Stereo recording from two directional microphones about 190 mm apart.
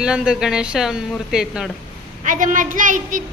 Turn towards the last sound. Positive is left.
turn(degrees=-45)  # may be behind; listen again after turning